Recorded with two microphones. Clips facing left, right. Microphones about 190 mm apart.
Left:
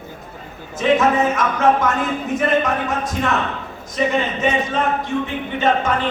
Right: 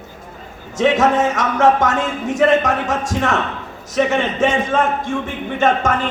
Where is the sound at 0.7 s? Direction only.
80° right.